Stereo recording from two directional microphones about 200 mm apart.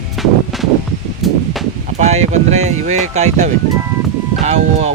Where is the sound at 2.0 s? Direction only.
35° right (ahead or behind).